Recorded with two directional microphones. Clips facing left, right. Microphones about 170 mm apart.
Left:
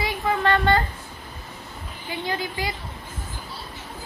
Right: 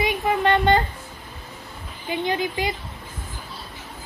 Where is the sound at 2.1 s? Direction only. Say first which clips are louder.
Right 5 dB; 20° right (ahead or behind).